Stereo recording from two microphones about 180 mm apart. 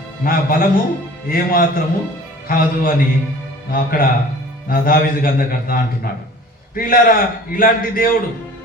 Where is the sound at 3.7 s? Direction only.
55° left (ahead or behind).